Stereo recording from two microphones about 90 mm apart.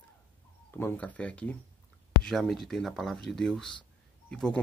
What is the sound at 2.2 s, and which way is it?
Speech, 5° left (ahead or behind).